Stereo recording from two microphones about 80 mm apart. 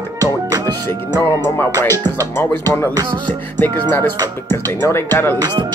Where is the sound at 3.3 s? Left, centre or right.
Left.